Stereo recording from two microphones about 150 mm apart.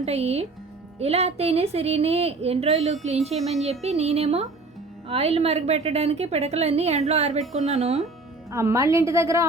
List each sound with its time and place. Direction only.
0.0 s a woman's voice: 45° right (ahead or behind)
8.4 s a woman's voice: 20° right (ahead or behind)